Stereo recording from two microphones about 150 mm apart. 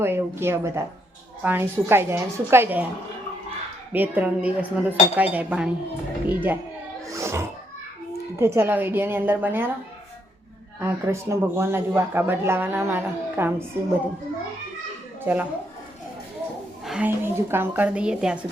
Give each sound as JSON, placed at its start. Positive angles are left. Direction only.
{"t": 0.0, "sound": "speech", "side_deg": -15}
{"t": 3.9, "sound": "speech", "side_deg": -10}
{"t": 7.1, "sound": "music", "side_deg": -20}
{"t": 8.4, "sound": "speech", "side_deg": -15}
{"t": 10.8, "sound": "speech", "side_deg": -15}
{"t": 15.2, "sound": "speech", "side_deg": -10}
{"t": 16.8, "sound": "a sound", "side_deg": -5}
{"t": 17.1, "sound": "speech", "side_deg": -15}